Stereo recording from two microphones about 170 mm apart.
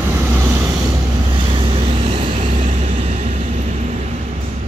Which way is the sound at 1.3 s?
30° right (ahead or behind).